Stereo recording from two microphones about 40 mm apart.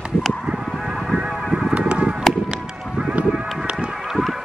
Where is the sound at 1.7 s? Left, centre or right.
Right.